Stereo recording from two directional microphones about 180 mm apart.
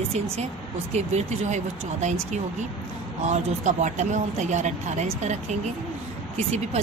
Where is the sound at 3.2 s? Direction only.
40° right (ahead or behind).